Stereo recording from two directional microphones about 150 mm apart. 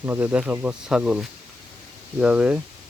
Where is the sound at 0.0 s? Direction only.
15° right (ahead or behind).